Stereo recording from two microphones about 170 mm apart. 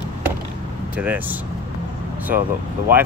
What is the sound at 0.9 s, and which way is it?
Speech, 10° right (ahead or behind).